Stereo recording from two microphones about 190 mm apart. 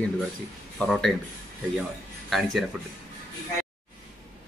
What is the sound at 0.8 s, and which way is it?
Speech, centre (ahead or behind).